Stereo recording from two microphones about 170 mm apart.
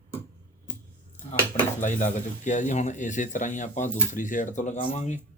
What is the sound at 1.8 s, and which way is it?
Speech, 45° left (ahead or behind).